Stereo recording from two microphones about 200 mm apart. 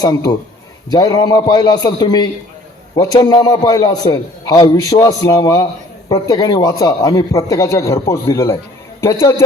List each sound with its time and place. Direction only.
0.0 s a man's voice: 20° left (ahead or behind)